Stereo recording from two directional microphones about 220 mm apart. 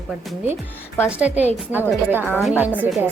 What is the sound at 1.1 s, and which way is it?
A woman's voice, 5° right (ahead or behind).